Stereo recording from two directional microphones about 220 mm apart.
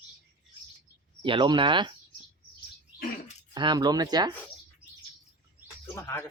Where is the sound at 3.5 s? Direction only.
20° right (ahead or behind).